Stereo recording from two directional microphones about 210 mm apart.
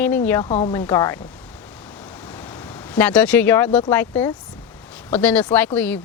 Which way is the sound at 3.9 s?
10° left (ahead or behind).